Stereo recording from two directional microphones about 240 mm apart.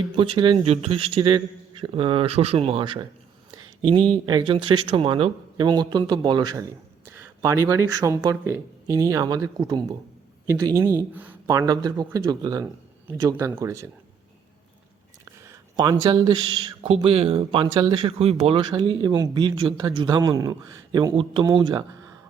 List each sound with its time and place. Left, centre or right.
0.2 s speech: right
3.5 s a sound: right
4.1 s speech: centre
15.2 s speech: centre